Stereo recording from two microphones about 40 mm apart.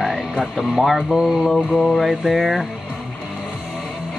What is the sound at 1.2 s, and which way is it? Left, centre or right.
Mantra, centre.